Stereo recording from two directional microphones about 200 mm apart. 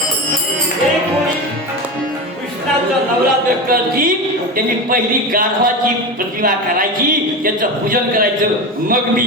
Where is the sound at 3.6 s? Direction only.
45° right (ahead or behind).